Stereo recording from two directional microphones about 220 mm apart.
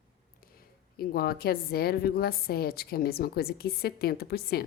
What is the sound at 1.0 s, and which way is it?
A woman's voice, 45° left (ahead or behind).